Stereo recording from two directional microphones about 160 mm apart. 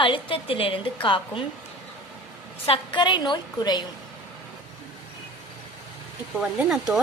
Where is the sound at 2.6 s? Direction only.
30° left (ahead or behind).